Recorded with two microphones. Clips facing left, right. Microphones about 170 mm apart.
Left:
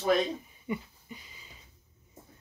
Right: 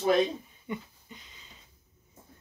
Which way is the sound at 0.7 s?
10° left (ahead or behind).